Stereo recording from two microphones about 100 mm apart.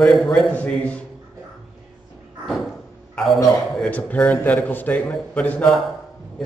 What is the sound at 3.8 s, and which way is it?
A man's voice, 15° left (ahead or behind).